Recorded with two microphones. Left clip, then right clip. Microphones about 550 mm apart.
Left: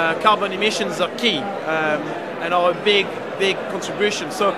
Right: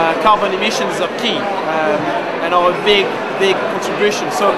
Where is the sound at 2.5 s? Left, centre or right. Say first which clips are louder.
Right 4 dB; left.